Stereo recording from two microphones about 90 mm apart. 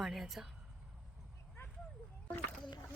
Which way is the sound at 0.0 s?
5° right (ahead or behind).